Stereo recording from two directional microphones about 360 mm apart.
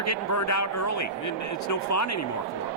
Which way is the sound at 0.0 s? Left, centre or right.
Left.